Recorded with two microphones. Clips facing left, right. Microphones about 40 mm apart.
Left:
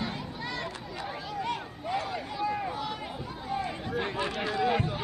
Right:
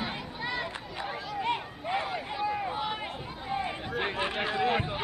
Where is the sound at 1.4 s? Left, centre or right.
Right.